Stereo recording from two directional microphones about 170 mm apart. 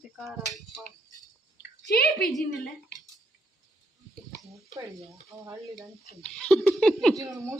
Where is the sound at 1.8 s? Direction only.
75° left (ahead or behind).